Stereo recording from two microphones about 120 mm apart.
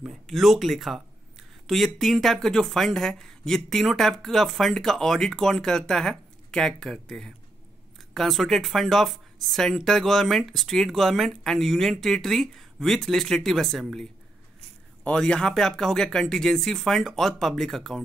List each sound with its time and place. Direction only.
0.0 s speech: centre (ahead or behind)
15.0 s speech: 5° left (ahead or behind)